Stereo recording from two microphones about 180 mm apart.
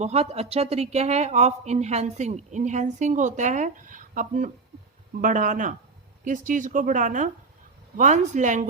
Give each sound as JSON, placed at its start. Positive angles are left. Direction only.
{"t": 0.0, "sound": "speech", "side_deg": -35}